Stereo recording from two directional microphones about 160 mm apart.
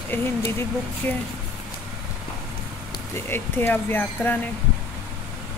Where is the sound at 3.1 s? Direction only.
15° left (ahead or behind).